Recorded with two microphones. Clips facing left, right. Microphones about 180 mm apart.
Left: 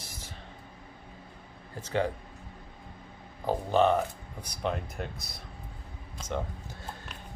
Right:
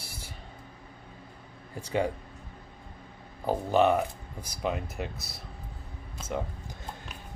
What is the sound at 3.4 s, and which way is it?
Speech, 10° right (ahead or behind).